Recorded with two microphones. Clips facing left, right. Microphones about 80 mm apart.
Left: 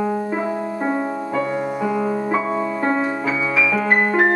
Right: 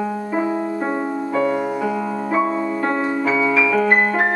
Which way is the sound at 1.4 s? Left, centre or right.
Centre.